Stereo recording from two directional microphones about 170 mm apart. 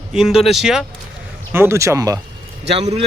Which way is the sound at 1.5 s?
15° right (ahead or behind).